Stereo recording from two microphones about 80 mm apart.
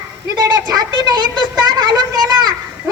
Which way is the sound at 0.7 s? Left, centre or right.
Right.